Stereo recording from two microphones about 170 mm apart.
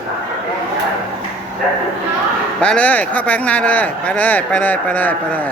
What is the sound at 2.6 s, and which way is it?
Speech, 5° left (ahead or behind).